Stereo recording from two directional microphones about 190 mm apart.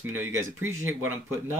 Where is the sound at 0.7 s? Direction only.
90° right.